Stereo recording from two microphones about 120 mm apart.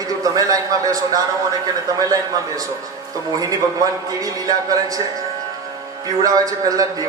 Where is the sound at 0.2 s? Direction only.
30° right (ahead or behind).